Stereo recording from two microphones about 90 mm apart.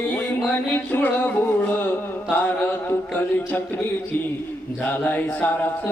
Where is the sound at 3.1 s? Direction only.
20° left (ahead or behind).